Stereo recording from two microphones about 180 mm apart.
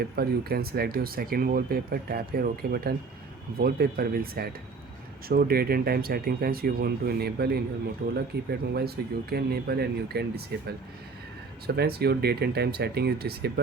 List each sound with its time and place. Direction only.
0.0 s speech: 60° right (ahead or behind)